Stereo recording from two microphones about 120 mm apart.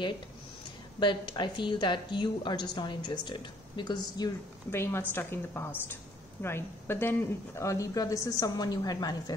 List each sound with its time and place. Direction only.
0.9 s a woman's voice: 40° left (ahead or behind)
4.6 s speech: 20° left (ahead or behind)